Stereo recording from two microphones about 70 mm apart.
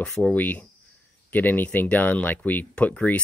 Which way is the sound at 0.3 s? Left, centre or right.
Left.